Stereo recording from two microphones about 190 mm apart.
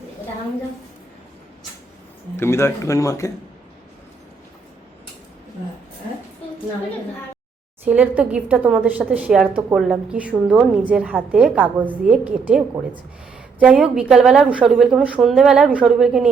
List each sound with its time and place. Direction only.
2.4 s speech: 15° left (ahead or behind)
7.9 s a woman's voice: 10° right (ahead or behind)